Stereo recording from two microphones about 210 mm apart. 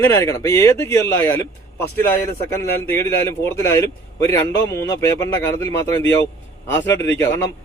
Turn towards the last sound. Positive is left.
turn(degrees=10)  # may be behind; listen again after turning